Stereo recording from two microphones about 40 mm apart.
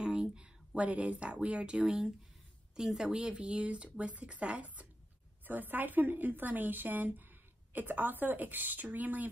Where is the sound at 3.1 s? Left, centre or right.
Right.